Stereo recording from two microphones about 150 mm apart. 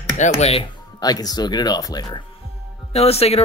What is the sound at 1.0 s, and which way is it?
Speech, 25° left (ahead or behind).